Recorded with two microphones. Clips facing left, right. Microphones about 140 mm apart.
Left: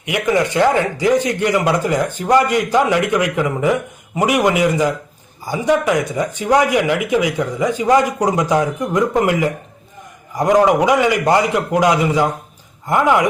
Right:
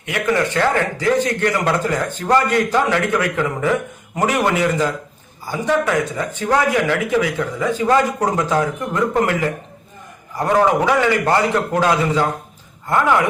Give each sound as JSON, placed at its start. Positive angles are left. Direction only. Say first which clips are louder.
{"t": 0.0, "sound": "a man's voice", "louder": "left 2 dB", "side_deg": 15}